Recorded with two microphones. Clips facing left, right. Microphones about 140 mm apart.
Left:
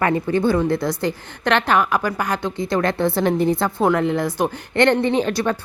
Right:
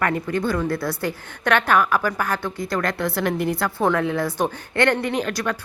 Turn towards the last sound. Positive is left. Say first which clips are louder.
# left 5 dB
turn(degrees=25)  # may be behind; listen again after turning